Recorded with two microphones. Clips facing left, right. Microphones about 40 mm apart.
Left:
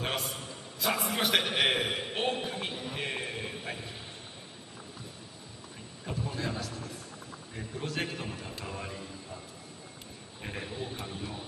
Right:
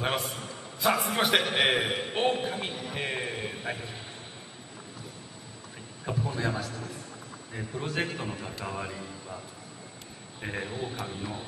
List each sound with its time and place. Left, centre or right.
0.0 s a man's voice: centre
6.0 s a sound: centre
7.5 s a man's voice: centre
10.4 s a man's voice: centre